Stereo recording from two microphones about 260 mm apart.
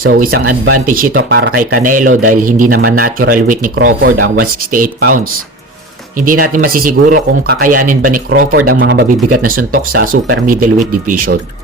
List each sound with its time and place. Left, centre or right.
0.0 s speech: right
6.1 s speech: right
8.5 s speech: right